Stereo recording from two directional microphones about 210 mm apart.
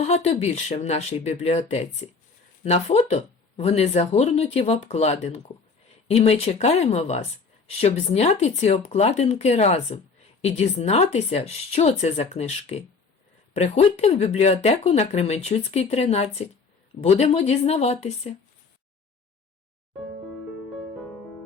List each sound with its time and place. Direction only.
0.0 s speech: 30° left (ahead or behind)